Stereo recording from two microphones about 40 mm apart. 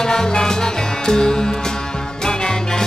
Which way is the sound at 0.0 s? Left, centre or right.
Centre.